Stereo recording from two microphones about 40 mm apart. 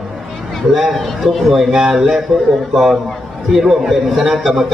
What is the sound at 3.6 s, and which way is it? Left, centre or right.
Speech, centre.